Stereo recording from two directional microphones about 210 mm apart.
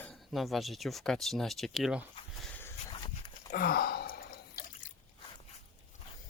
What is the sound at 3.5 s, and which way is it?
Drip, 45° left (ahead or behind).